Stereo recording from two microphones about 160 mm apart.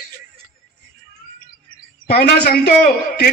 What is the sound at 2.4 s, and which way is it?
Speech, 75° left (ahead or behind).